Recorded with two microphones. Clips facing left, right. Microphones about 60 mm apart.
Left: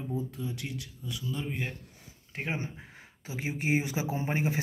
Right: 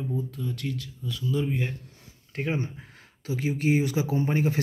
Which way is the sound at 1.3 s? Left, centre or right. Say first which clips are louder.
Right 9 dB; centre.